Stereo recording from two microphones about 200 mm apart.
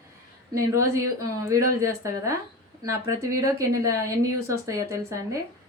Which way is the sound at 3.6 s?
15° right (ahead or behind).